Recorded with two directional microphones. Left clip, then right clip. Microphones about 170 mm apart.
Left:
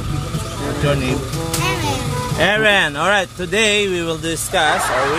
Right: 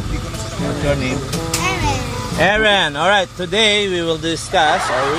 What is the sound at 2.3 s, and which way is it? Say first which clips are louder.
Speech: right 1 dB; 5° right (ahead or behind).